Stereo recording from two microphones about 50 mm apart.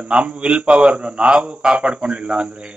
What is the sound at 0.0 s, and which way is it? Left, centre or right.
A man's voice, right.